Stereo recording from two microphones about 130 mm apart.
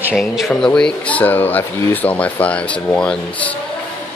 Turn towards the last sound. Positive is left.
turn(degrees=10)  # may be behind; listen again after turning